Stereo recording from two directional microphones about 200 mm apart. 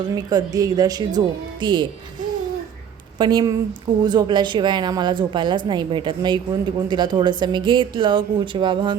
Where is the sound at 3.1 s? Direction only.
20° right (ahead or behind).